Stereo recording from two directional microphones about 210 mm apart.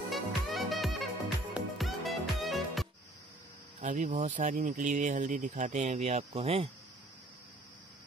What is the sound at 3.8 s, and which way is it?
Speech, 35° right (ahead or behind).